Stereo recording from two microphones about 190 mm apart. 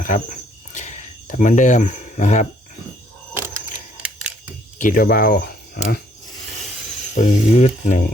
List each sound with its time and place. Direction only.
0.7 s cricket: 40° left (ahead or behind)
3.3 s camera: 10° right (ahead or behind)
4.8 s speech: 45° left (ahead or behind)
7.2 s speech: 35° left (ahead or behind)